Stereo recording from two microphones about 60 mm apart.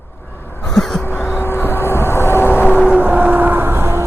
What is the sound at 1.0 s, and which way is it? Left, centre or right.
Vehicle, left.